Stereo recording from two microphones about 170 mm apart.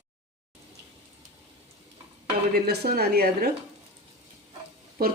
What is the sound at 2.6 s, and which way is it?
Speech, 70° right (ahead or behind).